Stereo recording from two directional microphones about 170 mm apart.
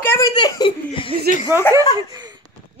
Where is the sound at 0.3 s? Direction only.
25° left (ahead or behind).